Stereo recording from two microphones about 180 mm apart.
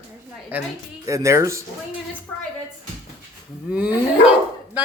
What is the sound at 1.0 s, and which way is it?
Speech, 15° right (ahead or behind).